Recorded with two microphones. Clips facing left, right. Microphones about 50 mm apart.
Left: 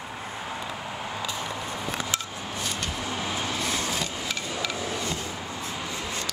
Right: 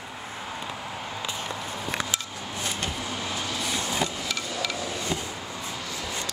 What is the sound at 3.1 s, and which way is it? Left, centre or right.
Vehicle, left.